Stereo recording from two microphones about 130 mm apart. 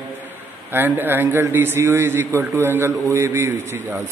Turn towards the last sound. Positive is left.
turn(degrees=-15)  # may be behind; listen again after turning